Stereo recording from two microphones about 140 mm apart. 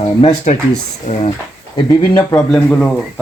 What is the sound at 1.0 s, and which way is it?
Speech, 60° left (ahead or behind).